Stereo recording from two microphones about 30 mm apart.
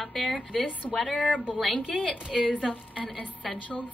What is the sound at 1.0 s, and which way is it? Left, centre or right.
A woman's voice, centre.